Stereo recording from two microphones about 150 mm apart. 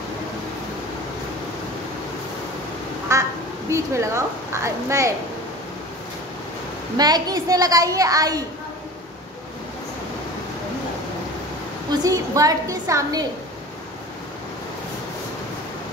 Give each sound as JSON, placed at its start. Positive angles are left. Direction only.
{"t": 3.1, "sound": "a woman's voice", "side_deg": -20}
{"t": 7.0, "sound": "a woman's voice", "side_deg": -25}
{"t": 11.9, "sound": "a woman's voice", "side_deg": -25}